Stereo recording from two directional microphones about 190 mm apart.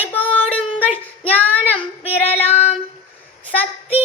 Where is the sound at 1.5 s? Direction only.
10° left (ahead or behind).